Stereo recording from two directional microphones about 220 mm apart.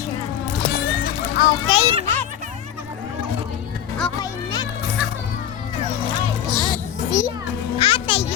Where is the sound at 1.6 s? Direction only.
20° left (ahead or behind).